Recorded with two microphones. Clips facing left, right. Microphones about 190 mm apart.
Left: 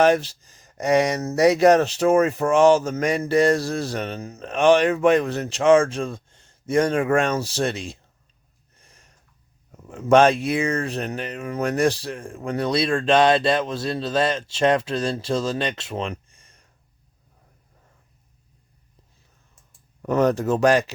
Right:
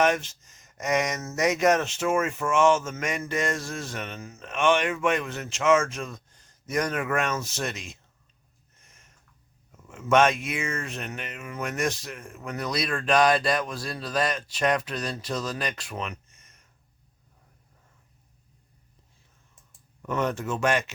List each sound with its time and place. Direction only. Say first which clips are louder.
0.0 s speech: left 6 dB; 35° left (ahead or behind)
8.7 s a sound: left 4 dB; 35° left (ahead or behind)
9.8 s speech: left 6 dB; 35° left (ahead or behind)
20.0 s speech: left 8 dB; 40° left (ahead or behind)